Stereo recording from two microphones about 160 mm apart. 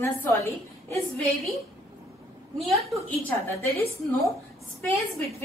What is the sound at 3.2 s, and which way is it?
Speech, 15° left (ahead or behind).